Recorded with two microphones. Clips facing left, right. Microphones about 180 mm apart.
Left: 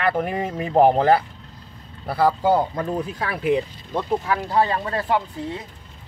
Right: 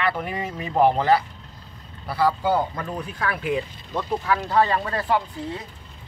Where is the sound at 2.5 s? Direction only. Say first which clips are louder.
Left 3 dB; 25° left (ahead or behind).